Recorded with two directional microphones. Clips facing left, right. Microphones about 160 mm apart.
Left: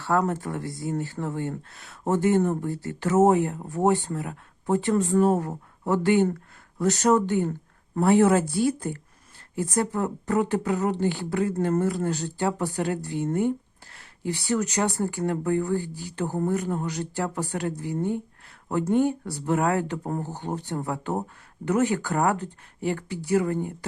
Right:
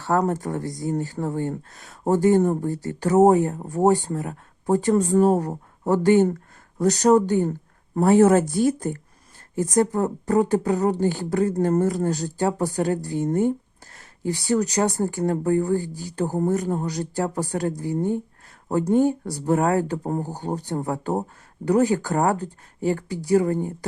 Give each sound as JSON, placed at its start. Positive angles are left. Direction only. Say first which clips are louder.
{"t": 0.0, "sound": "speech", "louder": "right 2 dB", "side_deg": -40}